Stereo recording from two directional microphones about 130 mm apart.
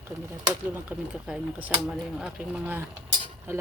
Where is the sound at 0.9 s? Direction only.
10° right (ahead or behind).